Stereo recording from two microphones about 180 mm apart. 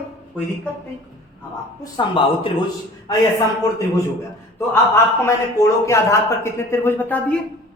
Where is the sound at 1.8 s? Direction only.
25° left (ahead or behind).